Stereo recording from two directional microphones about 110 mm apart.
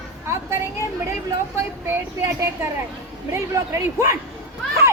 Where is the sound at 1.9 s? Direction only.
25° right (ahead or behind).